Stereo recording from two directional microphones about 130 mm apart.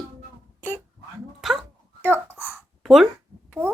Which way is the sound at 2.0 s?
15° right (ahead or behind).